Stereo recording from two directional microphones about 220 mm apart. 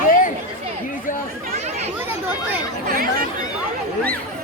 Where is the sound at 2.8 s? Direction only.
40° right (ahead or behind).